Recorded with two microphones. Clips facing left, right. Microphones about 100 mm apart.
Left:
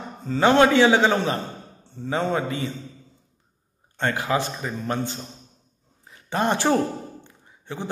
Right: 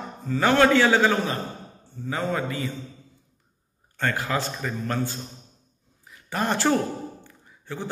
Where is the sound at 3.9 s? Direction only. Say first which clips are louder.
Left 3 dB; 20° left (ahead or behind).